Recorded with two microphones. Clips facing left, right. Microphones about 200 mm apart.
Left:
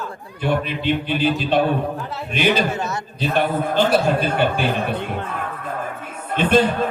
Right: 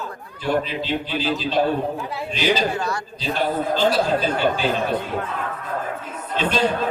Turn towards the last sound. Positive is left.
turn(degrees=55)  # may be behind; listen again after turning